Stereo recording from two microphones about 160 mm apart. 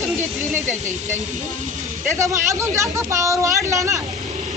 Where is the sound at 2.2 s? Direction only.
20° right (ahead or behind).